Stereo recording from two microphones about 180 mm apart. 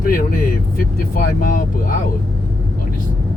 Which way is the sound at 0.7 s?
50° left (ahead or behind).